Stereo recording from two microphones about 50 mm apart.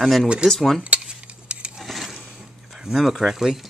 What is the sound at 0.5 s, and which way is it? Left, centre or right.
Cutlery, centre.